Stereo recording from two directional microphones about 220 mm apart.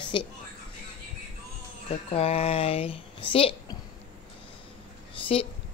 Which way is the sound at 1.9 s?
30° left (ahead or behind).